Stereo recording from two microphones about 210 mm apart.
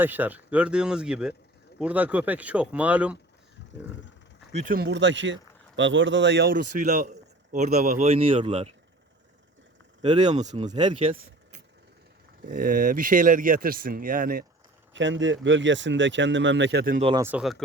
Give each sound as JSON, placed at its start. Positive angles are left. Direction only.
{"t": 0.0, "sound": "speech", "side_deg": -10}
{"t": 4.5, "sound": "speech", "side_deg": -40}
{"t": 10.0, "sound": "speech", "side_deg": -35}
{"t": 12.5, "sound": "speech", "side_deg": -40}
{"t": 14.9, "sound": "speech", "side_deg": -60}
{"t": 17.0, "sound": "speech", "side_deg": -25}
{"t": 17.2, "sound": "speech", "side_deg": -5}